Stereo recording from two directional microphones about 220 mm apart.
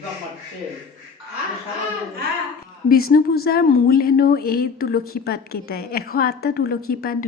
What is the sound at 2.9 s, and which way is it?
A woman's voice, 45° left (ahead or behind).